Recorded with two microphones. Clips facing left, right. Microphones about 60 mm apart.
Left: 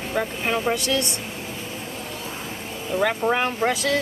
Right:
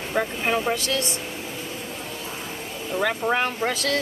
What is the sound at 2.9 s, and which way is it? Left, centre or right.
Speech, centre.